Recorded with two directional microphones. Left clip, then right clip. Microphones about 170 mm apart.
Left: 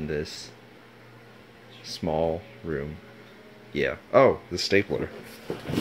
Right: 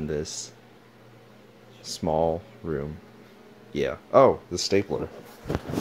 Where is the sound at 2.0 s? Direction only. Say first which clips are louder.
Right 2 dB; 20° right (ahead or behind).